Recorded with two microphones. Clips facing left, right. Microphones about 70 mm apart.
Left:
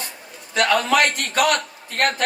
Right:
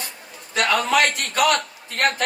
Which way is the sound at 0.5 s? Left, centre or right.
Left.